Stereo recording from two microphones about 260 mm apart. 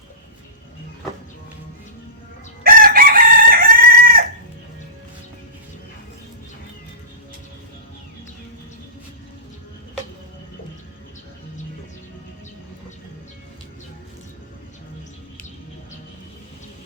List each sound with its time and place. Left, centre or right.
2.6 s chicken: right